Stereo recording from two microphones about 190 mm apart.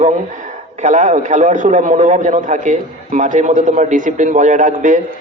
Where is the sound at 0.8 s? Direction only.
40° right (ahead or behind).